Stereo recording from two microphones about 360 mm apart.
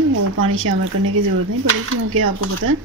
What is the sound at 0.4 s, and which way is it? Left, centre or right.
Speech, right.